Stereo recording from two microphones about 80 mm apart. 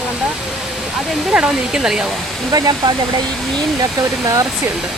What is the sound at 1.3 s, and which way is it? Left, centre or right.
Speech, centre.